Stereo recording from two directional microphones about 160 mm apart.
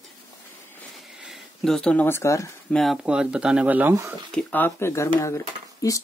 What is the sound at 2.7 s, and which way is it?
Speech, centre (ahead or behind).